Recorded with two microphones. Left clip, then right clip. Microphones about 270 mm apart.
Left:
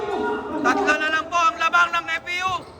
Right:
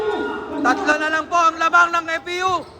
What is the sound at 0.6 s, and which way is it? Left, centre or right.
Speech, centre.